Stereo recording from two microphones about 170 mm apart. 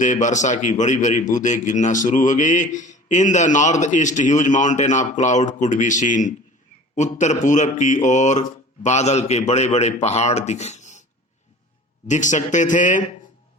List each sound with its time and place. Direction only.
0.0 s a man's voice: 45° left (ahead or behind)
12.0 s a man's voice: 45° left (ahead or behind)